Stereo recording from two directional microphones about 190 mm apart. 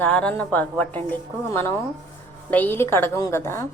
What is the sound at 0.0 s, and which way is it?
A woman's voice, 5° left (ahead or behind).